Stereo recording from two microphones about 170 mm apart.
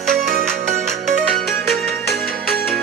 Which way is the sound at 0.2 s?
55° right (ahead or behind).